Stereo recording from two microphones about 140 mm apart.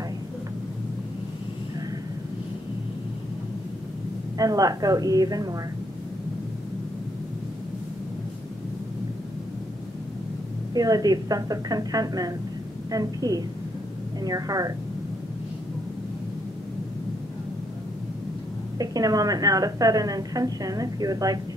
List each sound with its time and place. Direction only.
4.4 s a woman's voice: 25° right (ahead or behind)
10.7 s a woman's voice: 25° right (ahead or behind)
18.8 s a woman's voice: 25° right (ahead or behind)